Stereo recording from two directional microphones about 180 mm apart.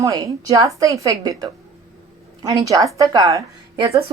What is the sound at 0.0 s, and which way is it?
A woman's voice, 20° right (ahead or behind).